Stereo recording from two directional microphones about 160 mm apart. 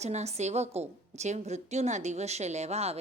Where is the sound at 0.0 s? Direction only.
45° right (ahead or behind).